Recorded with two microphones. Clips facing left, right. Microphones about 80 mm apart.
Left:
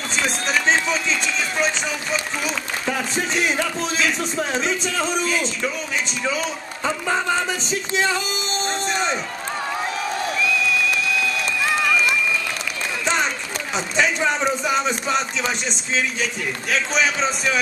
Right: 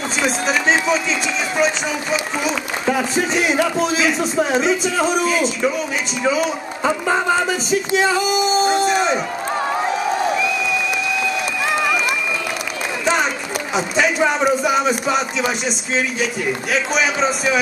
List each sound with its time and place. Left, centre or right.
0.2 s a man's voice: centre
9.8 s crowd: centre
11.8 s run: centre
13.7 s a man's voice: centre